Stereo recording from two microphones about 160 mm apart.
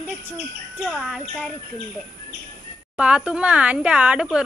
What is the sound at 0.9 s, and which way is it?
Speech, centre (ahead or behind).